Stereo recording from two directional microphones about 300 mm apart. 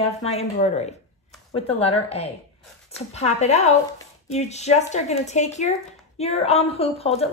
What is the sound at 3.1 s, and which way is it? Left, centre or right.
A woman's voice, left.